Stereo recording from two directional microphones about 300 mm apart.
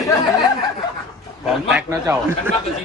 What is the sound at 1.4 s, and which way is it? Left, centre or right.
A man's voice, centre.